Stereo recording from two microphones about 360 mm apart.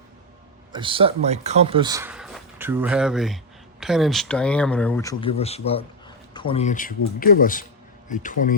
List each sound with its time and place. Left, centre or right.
0.7 s speech: centre; by 8.5 s left